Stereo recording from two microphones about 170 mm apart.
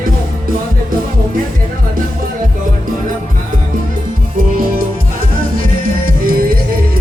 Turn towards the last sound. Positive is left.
turn(degrees=-60)  # may be behind; listen again after turning